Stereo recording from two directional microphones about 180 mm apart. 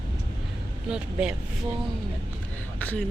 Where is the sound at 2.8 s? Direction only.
10° left (ahead or behind).